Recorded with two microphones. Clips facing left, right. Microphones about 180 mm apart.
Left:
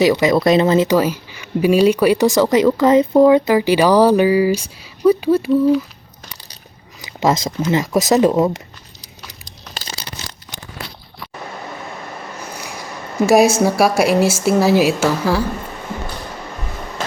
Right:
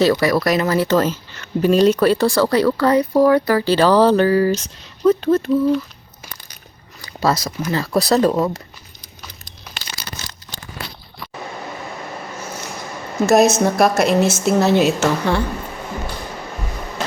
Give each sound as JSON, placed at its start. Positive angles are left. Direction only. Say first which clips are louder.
{"t": 0.0, "sound": "speech", "louder": "left 2 dB", "side_deg": 15}
{"t": 7.0, "sound": "speech", "louder": "left 2 dB", "side_deg": 20}
{"t": 9.7, "sound": "crumpling", "louder": "left 3 dB", "side_deg": 30}
{"t": 13.1, "sound": "speech", "louder": "left 1 dB", "side_deg": 10}